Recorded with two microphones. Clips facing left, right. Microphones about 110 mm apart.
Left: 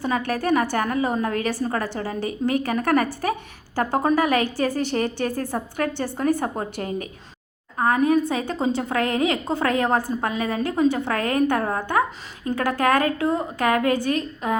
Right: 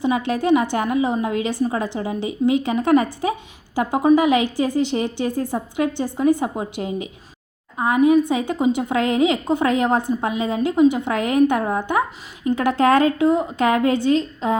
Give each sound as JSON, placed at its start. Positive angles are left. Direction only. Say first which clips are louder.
{"t": 0.3, "sound": "a woman's voice", "louder": "right 3 dB", "side_deg": -20}